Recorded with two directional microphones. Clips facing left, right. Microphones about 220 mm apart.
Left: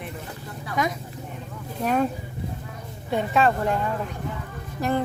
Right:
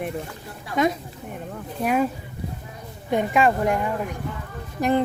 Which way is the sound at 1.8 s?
10° right (ahead or behind).